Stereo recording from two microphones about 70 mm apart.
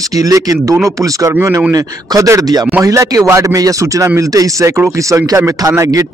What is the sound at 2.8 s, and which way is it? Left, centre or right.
A man's voice, right.